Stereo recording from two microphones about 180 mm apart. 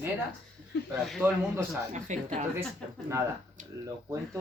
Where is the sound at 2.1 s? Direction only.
40° right (ahead or behind).